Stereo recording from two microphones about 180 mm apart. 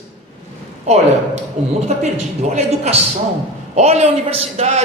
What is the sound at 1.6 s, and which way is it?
A man's voice, 35° right (ahead or behind).